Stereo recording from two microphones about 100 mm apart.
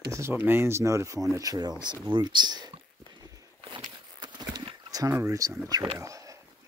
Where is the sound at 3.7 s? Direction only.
45° right (ahead or behind).